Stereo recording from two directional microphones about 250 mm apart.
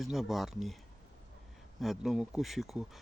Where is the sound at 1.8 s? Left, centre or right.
Centre.